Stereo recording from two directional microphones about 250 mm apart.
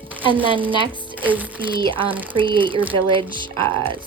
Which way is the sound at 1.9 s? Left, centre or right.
Centre.